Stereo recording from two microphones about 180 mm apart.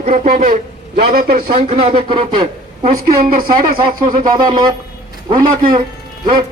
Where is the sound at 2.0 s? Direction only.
30° right (ahead or behind).